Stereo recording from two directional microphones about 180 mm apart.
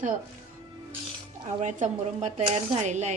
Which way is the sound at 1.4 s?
40° right (ahead or behind).